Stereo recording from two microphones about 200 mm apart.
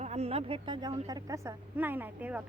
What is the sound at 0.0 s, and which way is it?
A woman's voice, 30° right (ahead or behind).